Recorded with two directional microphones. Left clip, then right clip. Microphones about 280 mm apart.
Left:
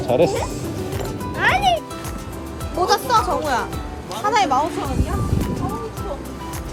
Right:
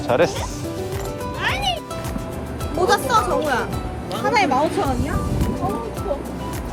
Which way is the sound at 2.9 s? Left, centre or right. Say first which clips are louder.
Even; left.